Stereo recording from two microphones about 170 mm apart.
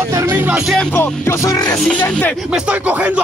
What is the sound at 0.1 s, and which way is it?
Music, 15° right (ahead or behind).